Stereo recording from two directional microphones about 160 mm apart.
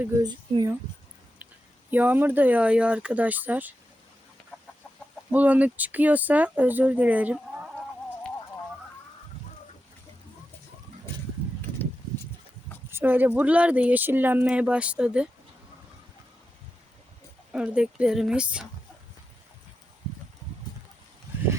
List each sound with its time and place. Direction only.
0.2 s speech: 25° right (ahead or behind)
1.9 s speech: 10° right (ahead or behind)
5.3 s speech: 10° right (ahead or behind)
12.9 s speech: 15° right (ahead or behind)
17.5 s speech: 5° right (ahead or behind)